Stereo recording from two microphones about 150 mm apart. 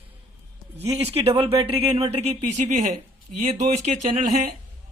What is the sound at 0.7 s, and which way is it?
Speech, 45° right (ahead or behind).